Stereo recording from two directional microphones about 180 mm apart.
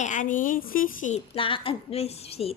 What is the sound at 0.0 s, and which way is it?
A woman's voice, 45° left (ahead or behind).